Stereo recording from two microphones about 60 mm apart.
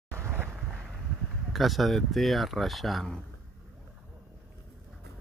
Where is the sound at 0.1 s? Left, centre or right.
Right.